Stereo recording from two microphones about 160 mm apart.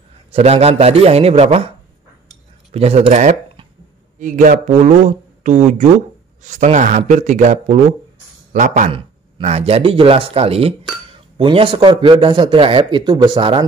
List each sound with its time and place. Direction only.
0.3 s a man's voice: 40° right (ahead or behind)
2.7 s a man's voice: 40° right (ahead or behind)